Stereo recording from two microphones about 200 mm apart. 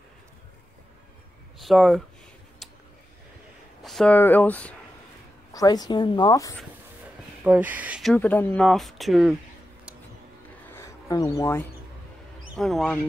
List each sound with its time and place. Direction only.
1.6 s speech: centre (ahead or behind)
2.6 s a sound: centre (ahead or behind)
3.8 s speech: centre (ahead or behind)
5.5 s a woman's voice: 20° left (ahead or behind)
7.4 s speech: 10° right (ahead or behind)
8.1 s speech: 10° left (ahead or behind)
10.7 s a sound: 15° left (ahead or behind)
12.5 s speech: centre (ahead or behind)